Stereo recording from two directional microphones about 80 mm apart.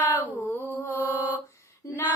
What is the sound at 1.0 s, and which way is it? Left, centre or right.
Mantra, right.